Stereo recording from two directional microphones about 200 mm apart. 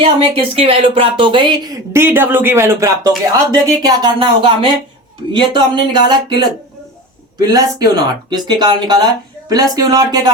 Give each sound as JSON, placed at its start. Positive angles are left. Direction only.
{"t": 0.0, "sound": "speech", "side_deg": -25}